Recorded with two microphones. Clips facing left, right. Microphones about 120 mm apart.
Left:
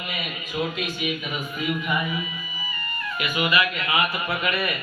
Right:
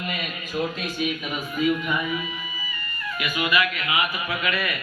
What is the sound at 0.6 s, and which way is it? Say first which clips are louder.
Speech: even; 5° left (ahead or behind).